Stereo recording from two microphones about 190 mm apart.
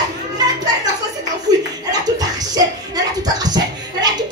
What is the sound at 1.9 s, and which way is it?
Music, 20° right (ahead or behind).